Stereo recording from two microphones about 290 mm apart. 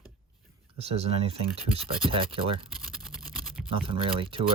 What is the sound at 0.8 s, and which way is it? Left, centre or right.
Speech, right.